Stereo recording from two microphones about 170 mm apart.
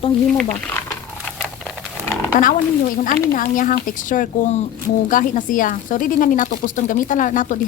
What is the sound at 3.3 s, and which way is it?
Speech, 50° left (ahead or behind).